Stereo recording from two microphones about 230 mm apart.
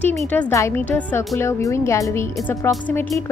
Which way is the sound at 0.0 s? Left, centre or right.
Centre.